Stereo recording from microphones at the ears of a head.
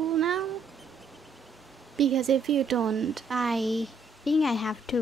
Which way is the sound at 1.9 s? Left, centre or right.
Right.